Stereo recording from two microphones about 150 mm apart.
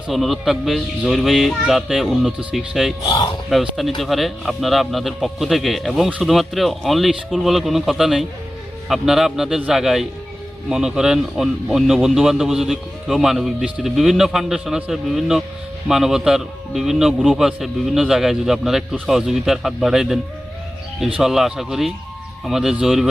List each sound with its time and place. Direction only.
0.1 s speech: centre (ahead or behind)
3.1 s speech: 30° left (ahead or behind)
3.5 s speech: centre (ahead or behind)
21.2 s speech: centre (ahead or behind)